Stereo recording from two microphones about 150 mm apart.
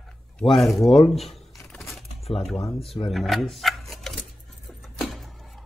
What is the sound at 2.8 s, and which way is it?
Speech, 40° left (ahead or behind).